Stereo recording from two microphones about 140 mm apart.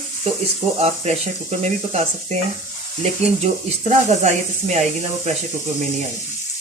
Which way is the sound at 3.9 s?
55° right (ahead or behind).